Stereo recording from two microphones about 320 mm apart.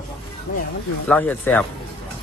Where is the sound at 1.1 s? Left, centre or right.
Centre.